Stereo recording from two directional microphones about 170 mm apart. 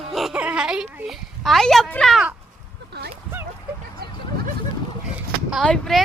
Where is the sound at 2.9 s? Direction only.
75° right (ahead or behind).